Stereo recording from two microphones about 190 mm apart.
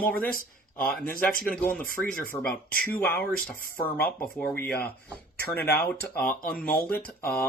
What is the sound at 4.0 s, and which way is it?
Speech, 50° left (ahead or behind).